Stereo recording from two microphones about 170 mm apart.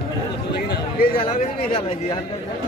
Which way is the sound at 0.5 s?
75° left (ahead or behind).